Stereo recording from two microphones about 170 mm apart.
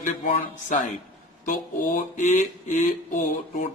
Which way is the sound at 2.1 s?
45° left (ahead or behind).